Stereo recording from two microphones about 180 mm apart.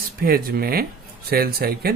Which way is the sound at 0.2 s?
55° right (ahead or behind).